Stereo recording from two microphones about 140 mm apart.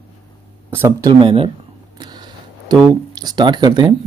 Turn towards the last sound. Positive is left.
turn(degrees=-30)  # may be behind; listen again after turning